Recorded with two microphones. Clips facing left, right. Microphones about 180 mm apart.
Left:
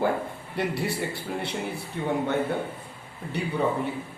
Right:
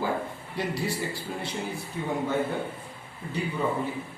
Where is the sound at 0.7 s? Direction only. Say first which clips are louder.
Left 1 dB; 60° left (ahead or behind).